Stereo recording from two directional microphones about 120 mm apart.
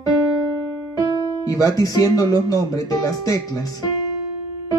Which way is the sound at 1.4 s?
30° left (ahead or behind).